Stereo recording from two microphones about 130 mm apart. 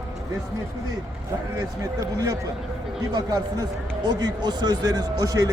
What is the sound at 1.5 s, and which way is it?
Speech, 25° right (ahead or behind).